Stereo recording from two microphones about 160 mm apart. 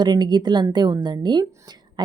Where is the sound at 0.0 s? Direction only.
25° right (ahead or behind).